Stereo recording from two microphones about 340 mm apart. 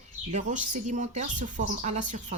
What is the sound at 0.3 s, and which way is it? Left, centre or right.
Speech, right.